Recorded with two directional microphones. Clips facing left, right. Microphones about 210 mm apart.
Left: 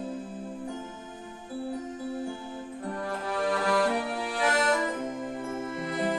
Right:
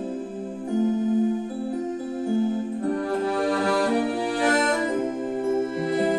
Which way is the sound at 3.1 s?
35° right (ahead or behind).